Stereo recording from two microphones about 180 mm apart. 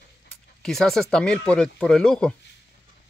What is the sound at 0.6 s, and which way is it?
Speech, centre (ahead or behind).